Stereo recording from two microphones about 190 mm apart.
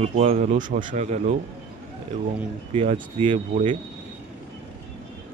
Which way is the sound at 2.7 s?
30° right (ahead or behind).